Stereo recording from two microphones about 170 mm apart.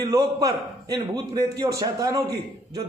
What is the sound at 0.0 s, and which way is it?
A man's voice, 20° right (ahead or behind).